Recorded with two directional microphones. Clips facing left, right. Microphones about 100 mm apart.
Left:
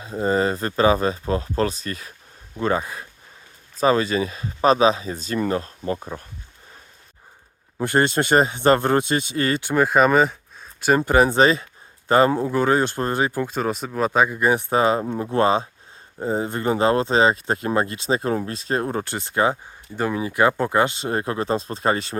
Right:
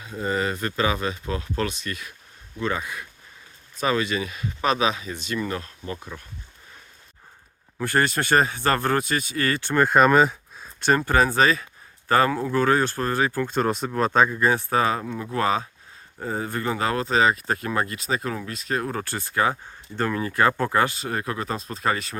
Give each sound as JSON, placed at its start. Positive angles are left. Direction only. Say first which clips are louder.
{"t": 0.0, "sound": "speech", "louder": "left 5 dB", "side_deg": 30}
{"t": 7.8, "sound": "speech", "louder": "left 3 dB", "side_deg": 25}
{"t": 11.0, "sound": "speech", "louder": "left 5 dB", "side_deg": 20}
{"t": 13.5, "sound": "speech", "louder": "right 1 dB", "side_deg": 0}
{"t": 20.0, "sound": "speech", "louder": "left 2 dB", "side_deg": 10}